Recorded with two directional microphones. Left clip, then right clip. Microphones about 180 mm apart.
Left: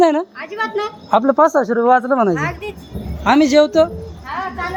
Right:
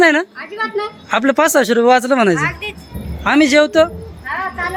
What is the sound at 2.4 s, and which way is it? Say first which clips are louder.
Speech: right 3 dB; 70° left (ahead or behind).